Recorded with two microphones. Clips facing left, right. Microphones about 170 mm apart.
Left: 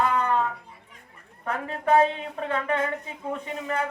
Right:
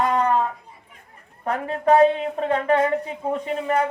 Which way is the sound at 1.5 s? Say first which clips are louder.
Right 5 dB; 35° right (ahead or behind).